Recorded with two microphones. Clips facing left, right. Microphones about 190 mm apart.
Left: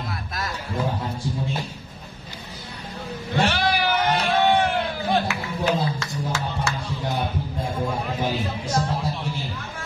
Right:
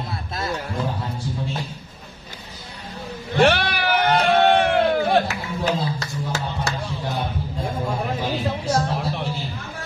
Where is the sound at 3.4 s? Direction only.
60° right (ahead or behind).